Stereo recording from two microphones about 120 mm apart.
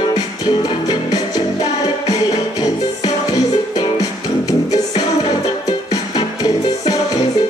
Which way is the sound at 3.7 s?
30° left (ahead or behind).